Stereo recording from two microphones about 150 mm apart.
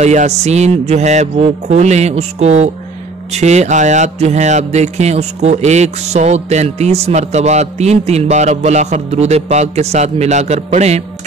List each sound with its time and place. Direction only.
0.0 s speech: 50° right (ahead or behind)